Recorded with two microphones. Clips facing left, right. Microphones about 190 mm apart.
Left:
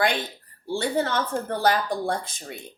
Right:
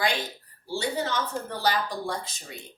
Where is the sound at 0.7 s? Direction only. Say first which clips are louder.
Left 4 dB; 55° left (ahead or behind).